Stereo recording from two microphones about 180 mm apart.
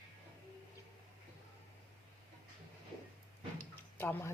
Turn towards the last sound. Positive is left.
turn(degrees=10)  # may be behind; listen again after turning